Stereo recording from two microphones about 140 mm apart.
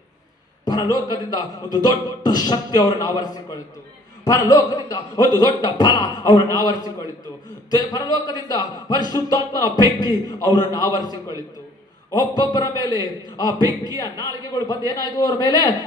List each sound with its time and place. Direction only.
0.7 s a man's voice: 30° left (ahead or behind)
13.6 s a man's voice: 25° right (ahead or behind)
13.9 s a man's voice: 25° left (ahead or behind)